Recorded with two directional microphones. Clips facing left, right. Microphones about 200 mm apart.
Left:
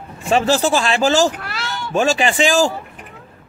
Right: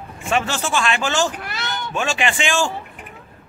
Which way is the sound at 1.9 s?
40° left (ahead or behind).